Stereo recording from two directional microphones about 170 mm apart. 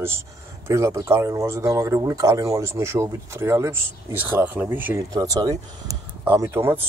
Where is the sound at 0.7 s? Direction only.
15° right (ahead or behind).